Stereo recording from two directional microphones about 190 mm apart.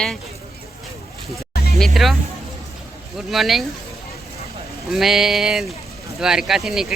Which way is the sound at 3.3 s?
Centre (ahead or behind).